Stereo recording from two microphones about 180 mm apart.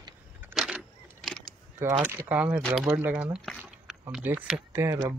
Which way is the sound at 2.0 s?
10° right (ahead or behind).